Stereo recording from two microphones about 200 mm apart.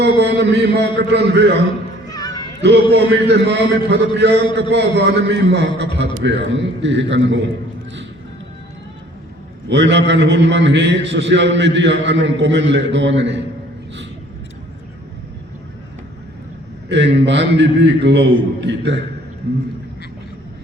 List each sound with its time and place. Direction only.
0.0 s a man's voice: 60° right (ahead or behind)
2.0 s a sound: 20° left (ahead or behind)
2.9 s a man's voice: 55° right (ahead or behind)
9.6 s a man's voice: 60° right (ahead or behind)
16.9 s a man's voice: 60° right (ahead or behind)